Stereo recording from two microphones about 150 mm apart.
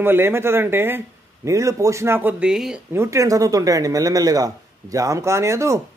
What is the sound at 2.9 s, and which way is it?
Speech, 20° right (ahead or behind).